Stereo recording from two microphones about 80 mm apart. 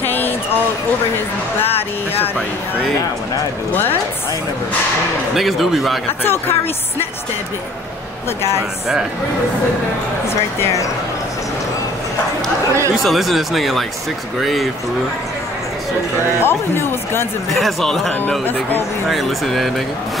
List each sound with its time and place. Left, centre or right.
0.0 s a sound: left
1.6 s speech: left
5.3 s speech: centre
6.2 s speech: left
8.4 s a woman's voice: left
13.0 s speech: centre
16.4 s speech: left
17.5 s speech: centre